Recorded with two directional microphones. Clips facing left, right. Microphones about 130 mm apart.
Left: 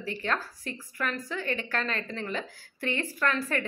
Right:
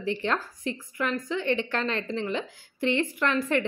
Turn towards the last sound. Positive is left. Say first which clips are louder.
# right 4 dB
turn(degrees=-20)  # may be behind; listen again after turning